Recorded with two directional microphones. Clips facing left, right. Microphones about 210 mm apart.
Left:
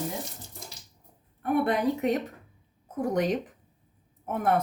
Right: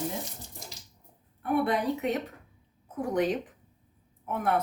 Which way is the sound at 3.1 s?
45° left (ahead or behind).